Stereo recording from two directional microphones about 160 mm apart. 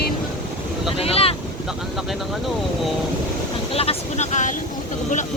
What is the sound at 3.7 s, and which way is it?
Vehicle, 40° left (ahead or behind).